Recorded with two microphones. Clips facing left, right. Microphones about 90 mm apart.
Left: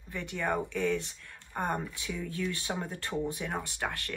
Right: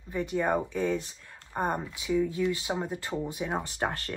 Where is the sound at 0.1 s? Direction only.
15° right (ahead or behind).